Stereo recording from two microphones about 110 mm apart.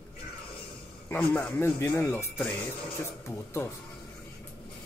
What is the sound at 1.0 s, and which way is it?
Speech, 20° left (ahead or behind).